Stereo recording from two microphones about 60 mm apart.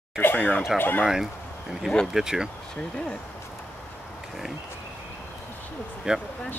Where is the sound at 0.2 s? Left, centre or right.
Left.